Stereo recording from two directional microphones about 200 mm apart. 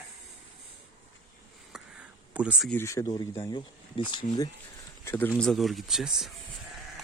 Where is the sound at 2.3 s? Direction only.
5° right (ahead or behind).